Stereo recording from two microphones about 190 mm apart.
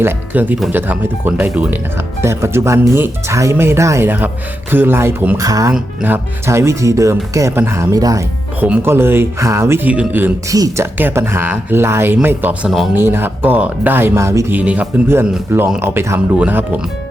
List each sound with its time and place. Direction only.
0.0 s speech: 10° right (ahead or behind)